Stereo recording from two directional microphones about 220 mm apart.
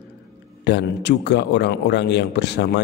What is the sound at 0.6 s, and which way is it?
A man's voice, 50° left (ahead or behind).